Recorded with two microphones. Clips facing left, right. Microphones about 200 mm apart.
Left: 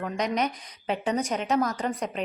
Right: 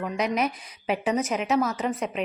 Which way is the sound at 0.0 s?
5° right (ahead or behind).